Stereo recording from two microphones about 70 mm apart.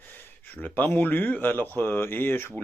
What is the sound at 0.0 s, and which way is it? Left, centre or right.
Speech, left.